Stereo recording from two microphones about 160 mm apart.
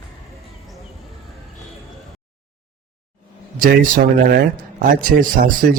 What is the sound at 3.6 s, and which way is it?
A man's voice, 60° right (ahead or behind).